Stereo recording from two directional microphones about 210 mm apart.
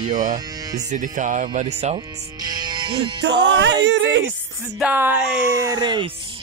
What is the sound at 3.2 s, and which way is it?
Music, 55° right (ahead or behind).